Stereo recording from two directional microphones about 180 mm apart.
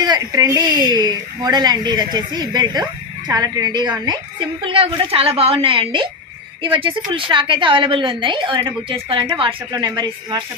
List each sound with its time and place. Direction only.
0.0 s speech: 20° right (ahead or behind)